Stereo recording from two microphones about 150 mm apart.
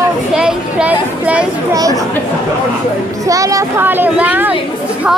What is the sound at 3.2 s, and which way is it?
A child's voice, 20° right (ahead or behind).